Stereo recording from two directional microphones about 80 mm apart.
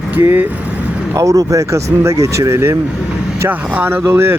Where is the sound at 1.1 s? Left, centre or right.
Right.